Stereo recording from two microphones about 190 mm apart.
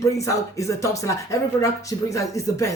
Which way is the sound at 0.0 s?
15° left (ahead or behind).